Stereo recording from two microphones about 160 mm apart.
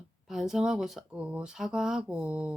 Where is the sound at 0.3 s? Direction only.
Centre (ahead or behind).